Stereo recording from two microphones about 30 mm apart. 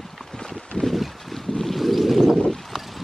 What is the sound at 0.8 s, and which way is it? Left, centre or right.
Boat, left.